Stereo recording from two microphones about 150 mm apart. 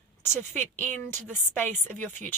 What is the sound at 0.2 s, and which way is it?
Speech, 15° left (ahead or behind).